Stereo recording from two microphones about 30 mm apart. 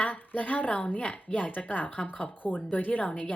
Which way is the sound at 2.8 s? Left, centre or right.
Left.